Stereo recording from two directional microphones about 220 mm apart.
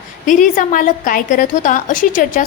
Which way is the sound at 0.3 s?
35° left (ahead or behind).